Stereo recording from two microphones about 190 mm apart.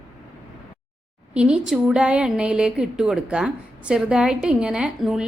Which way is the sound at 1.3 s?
5° right (ahead or behind).